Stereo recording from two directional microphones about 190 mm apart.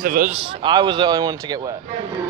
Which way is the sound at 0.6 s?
25° right (ahead or behind).